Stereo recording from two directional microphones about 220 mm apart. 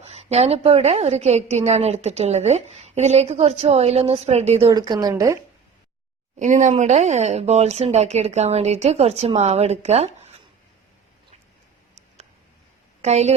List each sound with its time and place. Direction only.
0.1 s a woman's voice: 30° right (ahead or behind)
6.4 s a woman's voice: 35° right (ahead or behind)
13.0 s a woman's voice: 30° right (ahead or behind)